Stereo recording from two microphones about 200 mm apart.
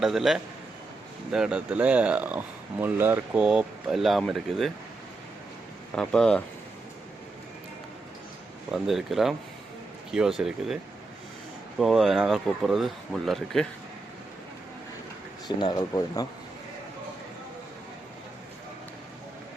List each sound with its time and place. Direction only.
0.0 s speech: centre (ahead or behind)
5.9 s speech: 5° left (ahead or behind)
8.7 s speech: centre (ahead or behind)
11.8 s speech: centre (ahead or behind)
15.4 s speech: 20° left (ahead or behind)